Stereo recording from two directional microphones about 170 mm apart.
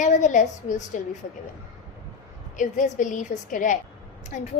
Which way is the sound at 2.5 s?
50° left (ahead or behind).